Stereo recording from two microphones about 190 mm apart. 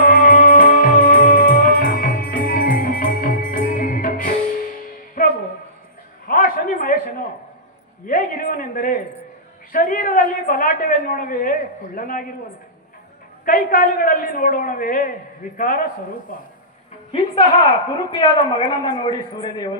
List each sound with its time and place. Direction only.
0.0 s music: 45° left (ahead or behind)
6.2 s a sound: 50° left (ahead or behind)
13.4 s a man's voice: 45° left (ahead or behind)
17.1 s a woman's voice: 30° left (ahead or behind)